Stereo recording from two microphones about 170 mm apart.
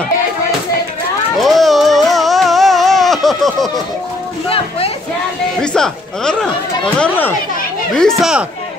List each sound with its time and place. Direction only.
1.4 s music: centre (ahead or behind)
4.5 s a sound: 35° left (ahead or behind)
5.6 s speech: 5° left (ahead or behind)
7.9 s speech: centre (ahead or behind)